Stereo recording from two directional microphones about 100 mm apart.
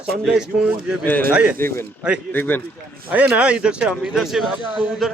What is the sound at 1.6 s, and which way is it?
Speech, 25° left (ahead or behind).